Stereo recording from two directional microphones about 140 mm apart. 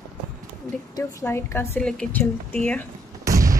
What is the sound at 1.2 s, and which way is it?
Speech, 15° left (ahead or behind).